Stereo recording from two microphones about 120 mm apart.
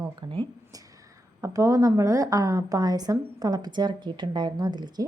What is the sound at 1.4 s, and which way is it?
A woman's voice, 25° right (ahead or behind).